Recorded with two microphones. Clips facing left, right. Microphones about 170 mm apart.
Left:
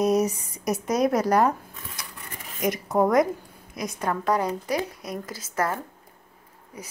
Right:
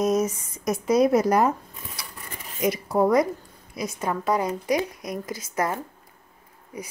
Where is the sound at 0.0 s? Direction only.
35° left (ahead or behind).